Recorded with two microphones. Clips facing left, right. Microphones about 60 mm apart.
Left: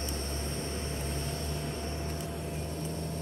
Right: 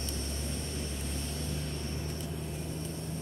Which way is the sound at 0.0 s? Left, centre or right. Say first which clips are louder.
Left 2 dB; left.